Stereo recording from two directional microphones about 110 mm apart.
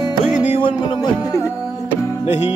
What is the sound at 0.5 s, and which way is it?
Music, 55° left (ahead or behind).